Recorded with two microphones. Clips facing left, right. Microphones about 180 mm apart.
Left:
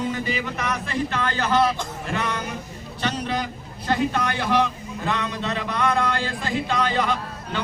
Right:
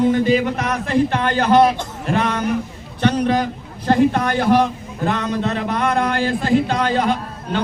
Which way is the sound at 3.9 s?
45° right (ahead or behind).